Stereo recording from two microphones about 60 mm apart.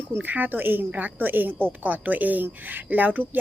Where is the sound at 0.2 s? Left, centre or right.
Right.